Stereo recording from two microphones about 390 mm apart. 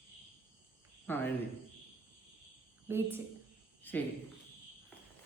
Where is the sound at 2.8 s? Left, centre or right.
Centre.